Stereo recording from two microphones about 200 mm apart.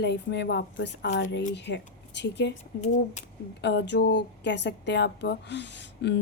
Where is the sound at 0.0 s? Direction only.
60° left (ahead or behind).